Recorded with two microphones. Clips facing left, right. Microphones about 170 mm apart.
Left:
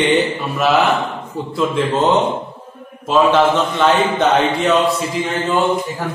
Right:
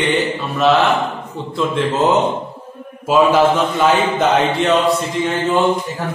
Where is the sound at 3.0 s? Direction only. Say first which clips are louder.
Right 1 dB; 5° right (ahead or behind).